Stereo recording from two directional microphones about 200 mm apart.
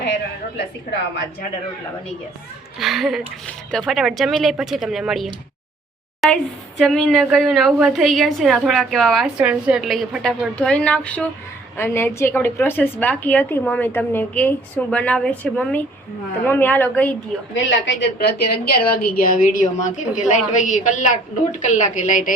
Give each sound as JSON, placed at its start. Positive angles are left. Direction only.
{"t": 0.5, "sound": "a woman's voice", "side_deg": 60}
{"t": 2.7, "sound": "a woman's voice", "side_deg": 0}
{"t": 17.5, "sound": "a woman's voice", "side_deg": 65}